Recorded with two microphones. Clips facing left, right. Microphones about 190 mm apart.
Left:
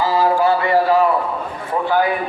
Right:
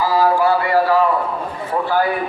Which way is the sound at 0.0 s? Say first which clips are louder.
Even; 20° left (ahead or behind).